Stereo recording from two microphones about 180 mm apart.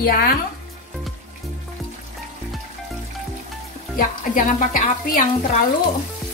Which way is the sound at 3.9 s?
50° left (ahead or behind).